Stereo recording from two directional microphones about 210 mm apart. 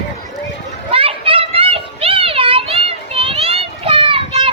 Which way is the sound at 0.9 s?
25° right (ahead or behind).